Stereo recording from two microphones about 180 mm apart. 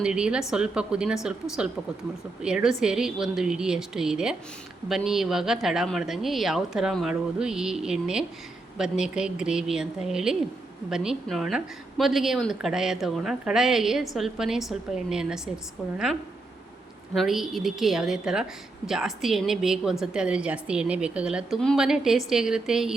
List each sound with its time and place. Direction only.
0.0 s a woman's voice: 5° right (ahead or behind)
17.2 s a woman's voice: centre (ahead or behind)